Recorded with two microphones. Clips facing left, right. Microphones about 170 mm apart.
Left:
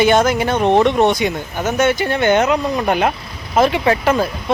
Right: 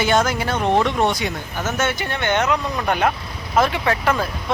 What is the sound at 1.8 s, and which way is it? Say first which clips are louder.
Speech: left 8 dB; 35° left (ahead or behind).